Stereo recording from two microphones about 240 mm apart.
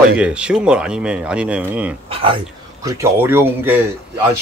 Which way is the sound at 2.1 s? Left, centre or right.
Right.